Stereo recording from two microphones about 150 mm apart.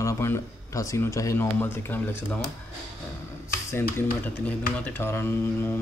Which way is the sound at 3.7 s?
15° left (ahead or behind).